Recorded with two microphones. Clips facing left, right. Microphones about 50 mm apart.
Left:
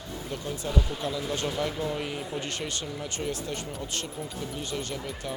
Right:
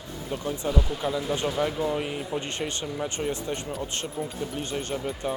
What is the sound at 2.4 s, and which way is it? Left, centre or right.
Speech, right.